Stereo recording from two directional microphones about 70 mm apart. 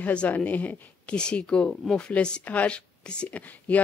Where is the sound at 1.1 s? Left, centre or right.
Centre.